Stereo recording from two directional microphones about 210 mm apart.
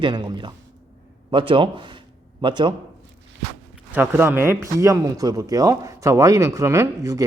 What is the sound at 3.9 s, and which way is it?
A man's voice, 10° right (ahead or behind).